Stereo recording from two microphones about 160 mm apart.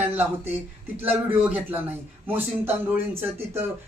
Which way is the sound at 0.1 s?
10° right (ahead or behind).